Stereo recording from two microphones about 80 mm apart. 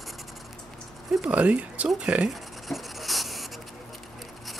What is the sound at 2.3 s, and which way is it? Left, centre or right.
Writing, centre.